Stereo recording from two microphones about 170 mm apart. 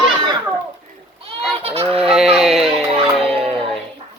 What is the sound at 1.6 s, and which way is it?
Fowl, 35° right (ahead or behind).